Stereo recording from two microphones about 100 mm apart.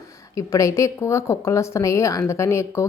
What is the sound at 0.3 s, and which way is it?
A woman's voice, 35° left (ahead or behind).